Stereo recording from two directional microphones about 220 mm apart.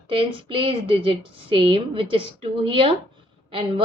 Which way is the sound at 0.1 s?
25° right (ahead or behind).